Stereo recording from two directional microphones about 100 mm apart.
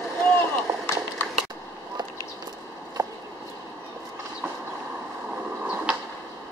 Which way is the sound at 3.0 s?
40° right (ahead or behind).